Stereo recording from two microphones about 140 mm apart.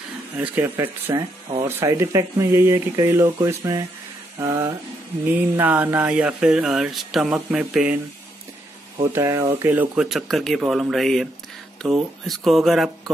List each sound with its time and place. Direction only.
0.4 s speech: 15° right (ahead or behind)
5.6 s speech: 15° right (ahead or behind)
9.1 s speech: 20° right (ahead or behind)
10.0 s speech: centre (ahead or behind)